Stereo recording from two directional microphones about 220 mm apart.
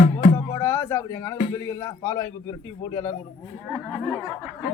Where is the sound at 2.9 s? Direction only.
20° left (ahead or behind).